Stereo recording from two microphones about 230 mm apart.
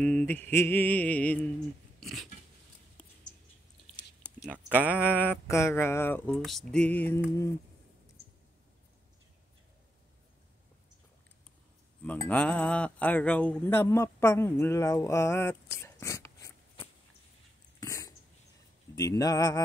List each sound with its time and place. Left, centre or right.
0.0 s speech: centre
2.0 s dog: centre
4.6 s speech: centre
5.0 s speech: centre
12.3 s speech: centre
17.7 s dog: centre
18.9 s speech: centre